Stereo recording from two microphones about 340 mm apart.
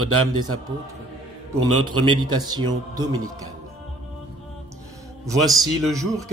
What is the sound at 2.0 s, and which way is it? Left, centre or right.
Speech, centre.